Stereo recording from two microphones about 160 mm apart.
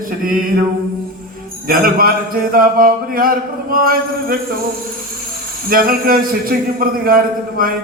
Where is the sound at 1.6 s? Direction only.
65° right (ahead or behind).